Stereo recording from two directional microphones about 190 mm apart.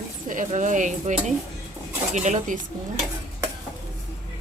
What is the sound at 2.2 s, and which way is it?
Speech, 40° right (ahead or behind).